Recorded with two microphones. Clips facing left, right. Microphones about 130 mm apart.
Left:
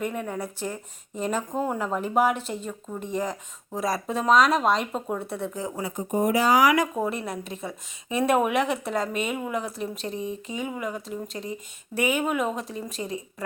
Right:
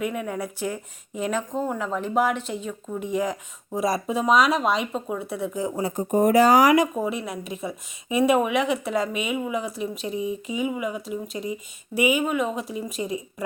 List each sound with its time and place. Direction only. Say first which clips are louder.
0.0 s speech: right 2 dB; 5° right (ahead or behind)
6.1 s speech: right 5 dB; 50° right (ahead or behind)
6.9 s speech: right 1 dB; 5° right (ahead or behind)